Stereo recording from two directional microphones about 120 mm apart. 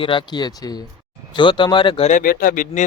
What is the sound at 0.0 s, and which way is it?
Speech, 45° left (ahead or behind).